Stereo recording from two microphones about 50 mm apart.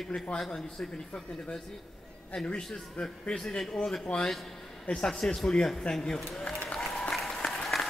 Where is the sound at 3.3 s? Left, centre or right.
Centre.